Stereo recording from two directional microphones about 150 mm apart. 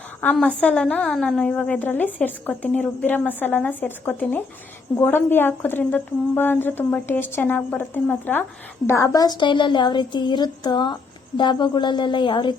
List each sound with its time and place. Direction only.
0.2 s a woman's voice: 10° left (ahead or behind); by 12.5 s 30° left (ahead or behind)